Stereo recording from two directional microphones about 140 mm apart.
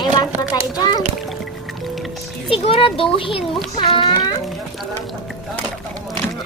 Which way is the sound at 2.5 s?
45° left (ahead or behind).